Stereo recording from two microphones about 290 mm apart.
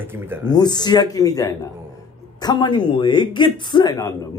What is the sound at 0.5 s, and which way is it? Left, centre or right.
A man's voice, centre.